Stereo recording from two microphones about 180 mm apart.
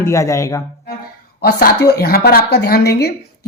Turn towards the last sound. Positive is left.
turn(degrees=60)  # may be behind; listen again after turning